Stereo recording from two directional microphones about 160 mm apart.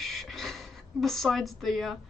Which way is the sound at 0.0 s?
Centre (ahead or behind).